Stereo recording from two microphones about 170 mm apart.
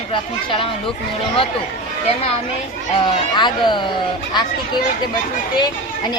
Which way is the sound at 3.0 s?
25° left (ahead or behind).